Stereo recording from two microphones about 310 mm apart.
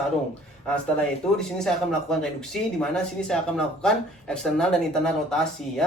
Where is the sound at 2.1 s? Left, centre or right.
Centre.